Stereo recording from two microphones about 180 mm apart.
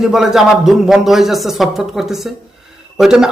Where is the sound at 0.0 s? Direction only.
Centre (ahead or behind).